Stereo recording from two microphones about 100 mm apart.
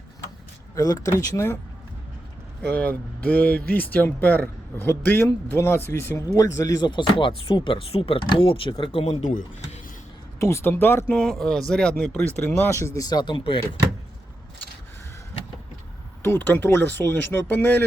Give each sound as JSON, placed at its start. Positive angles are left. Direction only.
{"t": 0.8, "sound": "speech", "side_deg": 35}
{"t": 2.6, "sound": "speech", "side_deg": 15}
{"t": 6.2, "sound": "speech", "side_deg": 35}
{"t": 10.4, "sound": "speech", "side_deg": 25}
{"t": 11.1, "sound": "speech", "side_deg": 5}
{"t": 16.2, "sound": "speech", "side_deg": 20}